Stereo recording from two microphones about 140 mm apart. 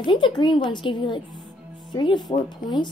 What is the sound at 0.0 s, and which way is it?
A woman's voice, 35° left (ahead or behind).